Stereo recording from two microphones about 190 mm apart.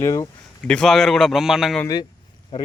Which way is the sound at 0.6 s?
5° left (ahead or behind).